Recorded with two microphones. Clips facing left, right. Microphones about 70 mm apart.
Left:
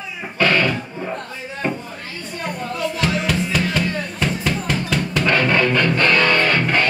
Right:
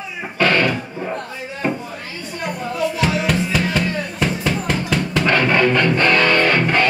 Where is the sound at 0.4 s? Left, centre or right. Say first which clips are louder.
Right 1 dB; centre.